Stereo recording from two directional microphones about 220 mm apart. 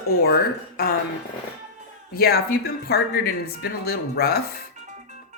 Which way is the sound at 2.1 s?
45° left (ahead or behind).